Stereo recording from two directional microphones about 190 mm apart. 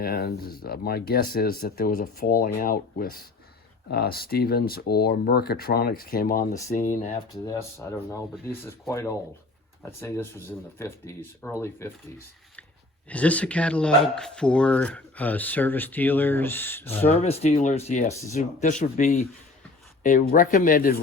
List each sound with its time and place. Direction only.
0.0 s speech: 55° left (ahead or behind)
6.7 s speech: 35° left (ahead or behind)
7.5 s speech: 15° left (ahead or behind)
13.1 s speech: 5° left (ahead or behind)
17.0 s speech: 35° left (ahead or behind)
18.1 s speech: 15° left (ahead or behind)
18.3 s speech: 40° left (ahead or behind)